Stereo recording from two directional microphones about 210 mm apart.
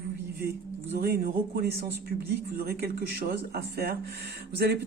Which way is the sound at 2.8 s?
50° right (ahead or behind).